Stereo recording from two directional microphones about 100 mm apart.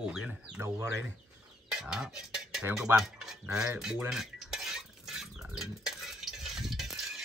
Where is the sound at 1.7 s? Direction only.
5° right (ahead or behind).